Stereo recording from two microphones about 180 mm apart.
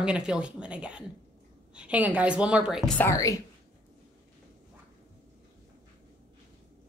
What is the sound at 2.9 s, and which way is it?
Speech, 15° left (ahead or behind).